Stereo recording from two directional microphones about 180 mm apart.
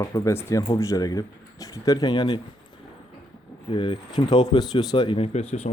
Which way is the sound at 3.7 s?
30° left (ahead or behind).